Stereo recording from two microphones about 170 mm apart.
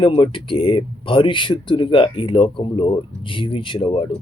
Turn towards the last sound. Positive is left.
turn(degrees=30)  # may be behind; listen again after turning